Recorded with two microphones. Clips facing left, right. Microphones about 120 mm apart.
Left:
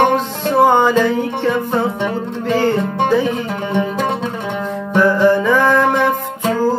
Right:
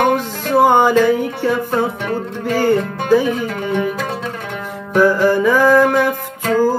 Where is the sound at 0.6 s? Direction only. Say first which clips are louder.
Right 1 dB; 15° right (ahead or behind).